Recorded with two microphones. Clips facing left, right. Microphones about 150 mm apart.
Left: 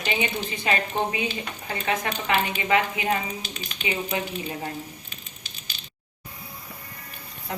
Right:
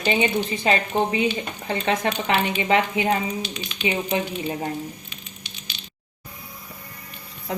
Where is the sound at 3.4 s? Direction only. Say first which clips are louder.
Right 5 dB; 40° left (ahead or behind).